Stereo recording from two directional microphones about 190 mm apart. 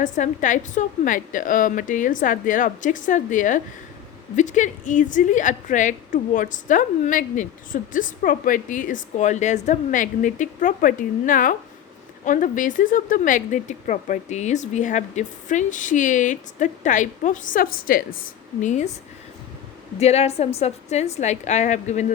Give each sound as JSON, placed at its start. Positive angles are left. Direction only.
{"t": 0.0, "sound": "a woman's voice", "side_deg": 40}
{"t": 20.0, "sound": "speech", "side_deg": 35}